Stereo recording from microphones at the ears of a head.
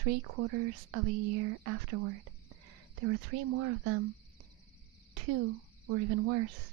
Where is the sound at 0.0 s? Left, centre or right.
Right.